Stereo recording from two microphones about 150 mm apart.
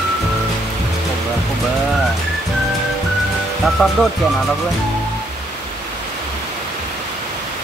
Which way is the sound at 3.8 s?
Centre (ahead or behind).